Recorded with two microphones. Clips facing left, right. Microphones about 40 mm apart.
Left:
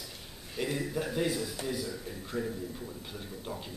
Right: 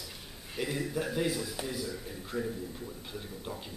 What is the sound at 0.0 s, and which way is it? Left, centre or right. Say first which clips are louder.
Speech: even; centre.